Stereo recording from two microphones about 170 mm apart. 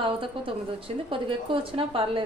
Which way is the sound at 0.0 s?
30° right (ahead or behind).